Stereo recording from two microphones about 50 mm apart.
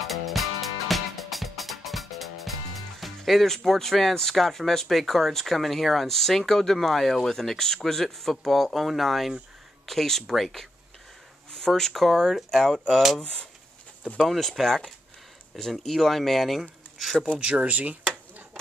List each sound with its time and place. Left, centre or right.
0.0 s music: centre
3.0 s speech: centre
13.2 s speech: left
14.2 s speech: centre
17.4 s speech: right
17.6 s speech: right